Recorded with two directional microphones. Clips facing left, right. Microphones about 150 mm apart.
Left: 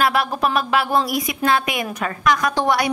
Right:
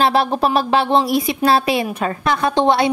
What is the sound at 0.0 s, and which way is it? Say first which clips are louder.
Speech: right 3 dB; 30° right (ahead or behind).